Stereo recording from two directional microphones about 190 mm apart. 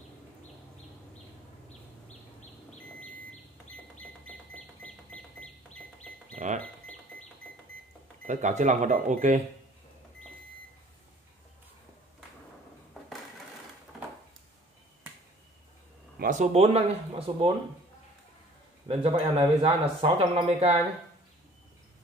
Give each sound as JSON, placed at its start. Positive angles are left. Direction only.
{"t": 4.8, "sound": "bird", "side_deg": 5}
{"t": 6.3, "sound": "a sound", "side_deg": -40}
{"t": 8.3, "sound": "speech", "side_deg": -40}
{"t": 16.2, "sound": "speech", "side_deg": -40}
{"t": 18.9, "sound": "speech", "side_deg": -30}